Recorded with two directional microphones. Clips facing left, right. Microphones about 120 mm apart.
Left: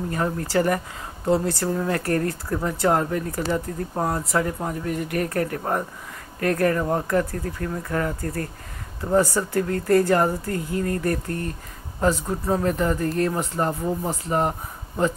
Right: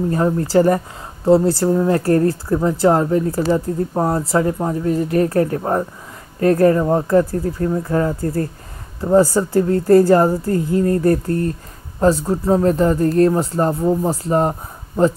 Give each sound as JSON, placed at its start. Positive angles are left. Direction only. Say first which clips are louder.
{"t": 0.1, "sound": "speech", "louder": "right 7 dB", "side_deg": -30}